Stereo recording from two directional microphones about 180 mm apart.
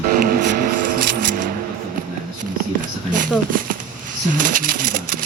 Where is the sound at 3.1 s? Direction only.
50° right (ahead or behind).